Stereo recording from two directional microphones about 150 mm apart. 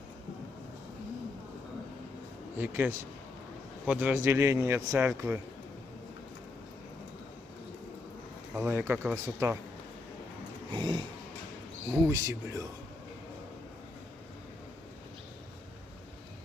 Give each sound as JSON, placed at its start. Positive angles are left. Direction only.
{"t": 2.6, "sound": "speech", "side_deg": -15}
{"t": 8.5, "sound": "speech", "side_deg": -15}
{"t": 10.7, "sound": "a sound", "side_deg": -30}
{"t": 12.0, "sound": "speech", "side_deg": -20}